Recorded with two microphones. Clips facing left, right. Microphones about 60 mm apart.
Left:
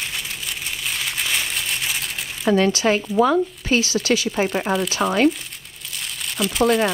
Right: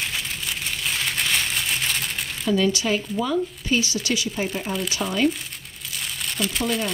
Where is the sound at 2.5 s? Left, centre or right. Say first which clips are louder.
Left 4 dB; left.